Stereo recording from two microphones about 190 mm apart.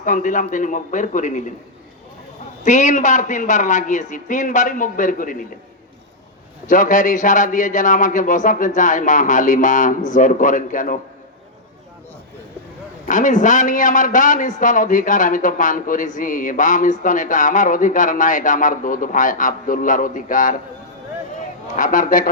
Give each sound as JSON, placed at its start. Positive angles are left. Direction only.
{"t": 0.0, "sound": "a man's voice", "side_deg": 45}
{"t": 2.6, "sound": "a man's voice", "side_deg": 40}
{"t": 6.7, "sound": "a man's voice", "side_deg": 45}
{"t": 13.1, "sound": "a man's voice", "side_deg": 40}
{"t": 21.8, "sound": "a man's voice", "side_deg": 45}